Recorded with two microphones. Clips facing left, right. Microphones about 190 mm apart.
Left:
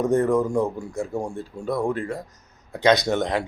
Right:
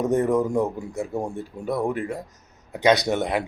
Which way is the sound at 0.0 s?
20° right (ahead or behind).